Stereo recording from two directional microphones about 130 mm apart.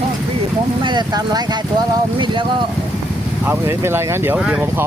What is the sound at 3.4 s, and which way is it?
Speech, 20° right (ahead or behind).